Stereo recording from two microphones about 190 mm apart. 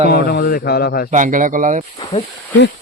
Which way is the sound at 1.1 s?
45° right (ahead or behind).